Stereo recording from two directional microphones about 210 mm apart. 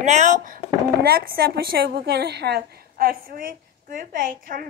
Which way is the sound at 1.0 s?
45° right (ahead or behind).